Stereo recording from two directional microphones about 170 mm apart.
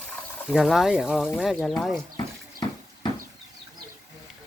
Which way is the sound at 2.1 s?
25° left (ahead or behind).